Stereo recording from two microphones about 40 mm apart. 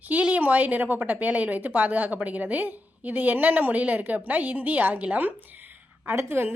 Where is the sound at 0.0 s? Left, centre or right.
Right.